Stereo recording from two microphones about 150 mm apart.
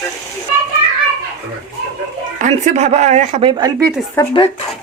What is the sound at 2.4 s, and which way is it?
Speech, 50° right (ahead or behind).